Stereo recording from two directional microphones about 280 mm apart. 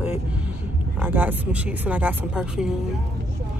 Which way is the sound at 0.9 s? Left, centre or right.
Centre.